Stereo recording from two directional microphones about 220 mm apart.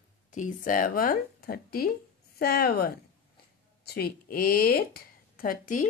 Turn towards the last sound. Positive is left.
turn(degrees=40)  # may be behind; listen again after turning